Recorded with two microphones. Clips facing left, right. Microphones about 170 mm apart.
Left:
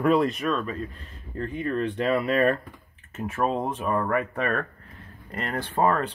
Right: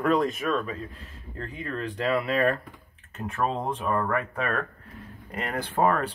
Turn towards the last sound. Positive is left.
turn(degrees=-10)  # may be behind; listen again after turning